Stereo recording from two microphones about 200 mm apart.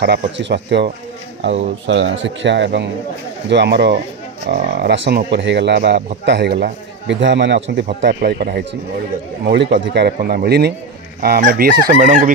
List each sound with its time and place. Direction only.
0.0 s speech: 55° right (ahead or behind)
8.1 s speech: 50° right (ahead or behind)